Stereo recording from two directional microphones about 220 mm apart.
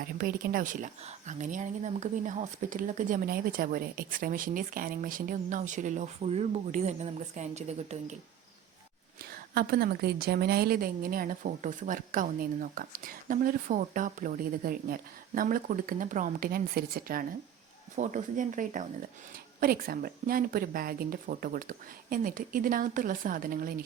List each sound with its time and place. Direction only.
0.0 s speech: 45° right (ahead or behind)
9.6 s speech: 45° right (ahead or behind)